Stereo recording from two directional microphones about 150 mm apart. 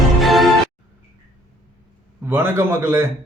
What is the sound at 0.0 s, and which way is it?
Music, centre (ahead or behind).